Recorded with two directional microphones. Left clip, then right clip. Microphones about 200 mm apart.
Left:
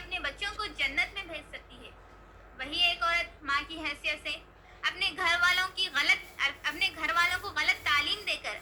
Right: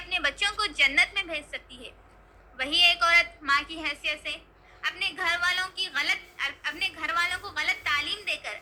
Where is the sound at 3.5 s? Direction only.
20° right (ahead or behind).